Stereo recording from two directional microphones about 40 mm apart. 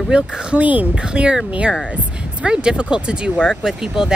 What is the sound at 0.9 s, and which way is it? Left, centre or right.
Speech, right.